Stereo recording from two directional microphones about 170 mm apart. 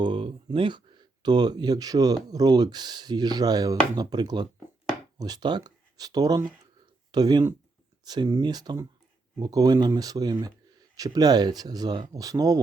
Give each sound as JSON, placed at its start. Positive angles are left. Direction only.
{"t": 0.0, "sound": "speech", "side_deg": -30}